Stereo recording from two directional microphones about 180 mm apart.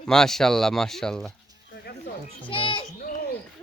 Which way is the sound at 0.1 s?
5° left (ahead or behind).